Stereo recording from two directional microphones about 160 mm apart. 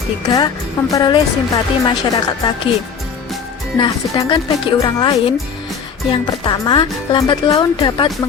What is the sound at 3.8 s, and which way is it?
Speech, 30° left (ahead or behind).